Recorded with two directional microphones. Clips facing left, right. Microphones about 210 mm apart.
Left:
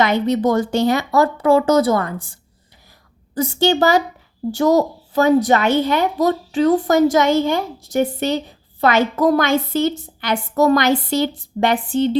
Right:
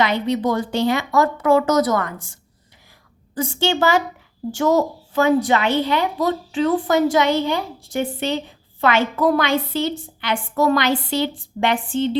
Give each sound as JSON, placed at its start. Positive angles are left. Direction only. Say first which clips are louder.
{"t": 0.0, "sound": "a woman's voice", "louder": "left 3 dB", "side_deg": 45}